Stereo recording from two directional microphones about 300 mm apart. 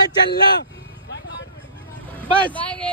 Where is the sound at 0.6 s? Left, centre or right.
Left.